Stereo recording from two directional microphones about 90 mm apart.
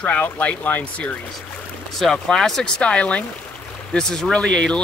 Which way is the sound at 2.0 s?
5° left (ahead or behind).